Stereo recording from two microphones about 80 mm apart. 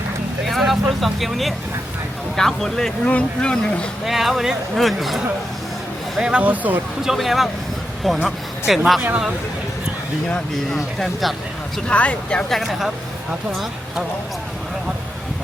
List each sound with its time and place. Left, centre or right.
0.4 s speech: centre
4.0 s speech: centre; by 6.8 s right
7.0 s speech: centre
10.2 s speech: centre
10.8 s speech: centre
11.9 s speech: centre
12.5 s speech: centre